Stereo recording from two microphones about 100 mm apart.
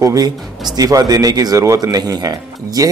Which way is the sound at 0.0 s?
35° right (ahead or behind).